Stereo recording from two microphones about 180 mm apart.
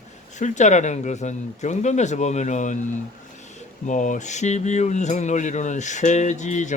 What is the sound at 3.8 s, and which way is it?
Speech, 45° left (ahead or behind).